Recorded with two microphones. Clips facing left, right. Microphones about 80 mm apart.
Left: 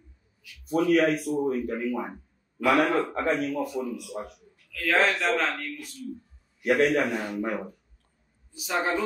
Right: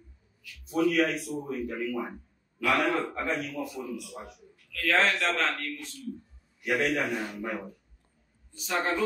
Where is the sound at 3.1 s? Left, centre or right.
Left.